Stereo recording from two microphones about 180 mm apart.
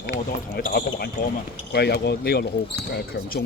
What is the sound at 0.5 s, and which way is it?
Speech, 60° left (ahead or behind).